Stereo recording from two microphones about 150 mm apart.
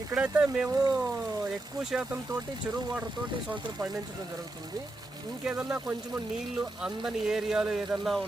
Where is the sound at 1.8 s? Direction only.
5° right (ahead or behind).